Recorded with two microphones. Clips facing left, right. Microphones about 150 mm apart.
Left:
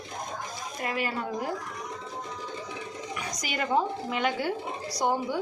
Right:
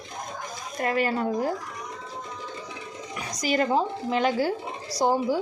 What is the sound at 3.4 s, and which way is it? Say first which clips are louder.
A woman's voice: right 4 dB; 35° right (ahead or behind).